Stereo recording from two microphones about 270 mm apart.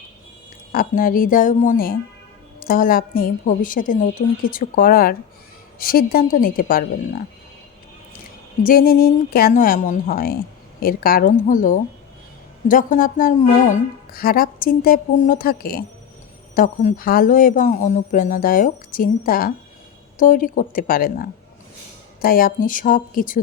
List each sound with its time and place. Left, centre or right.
0.7 s a woman's voice: left
8.6 s a woman's voice: left